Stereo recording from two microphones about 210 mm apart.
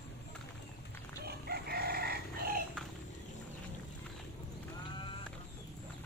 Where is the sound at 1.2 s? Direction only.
50° right (ahead or behind).